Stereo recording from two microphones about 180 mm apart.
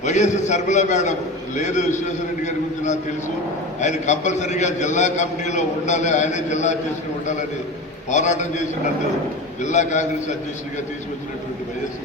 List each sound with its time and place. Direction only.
0.0 s a man's voice: 40° left (ahead or behind)
8.1 s a man's voice: 40° left (ahead or behind)